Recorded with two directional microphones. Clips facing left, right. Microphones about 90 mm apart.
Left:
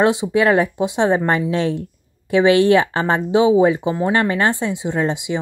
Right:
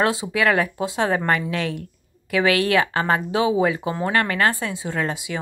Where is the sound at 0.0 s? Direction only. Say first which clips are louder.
Left 5 dB; 20° left (ahead or behind).